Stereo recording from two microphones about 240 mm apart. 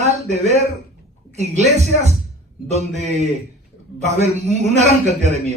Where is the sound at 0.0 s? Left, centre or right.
Right.